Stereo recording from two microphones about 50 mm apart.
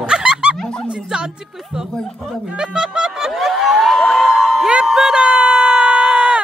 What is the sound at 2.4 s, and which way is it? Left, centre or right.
Music, centre.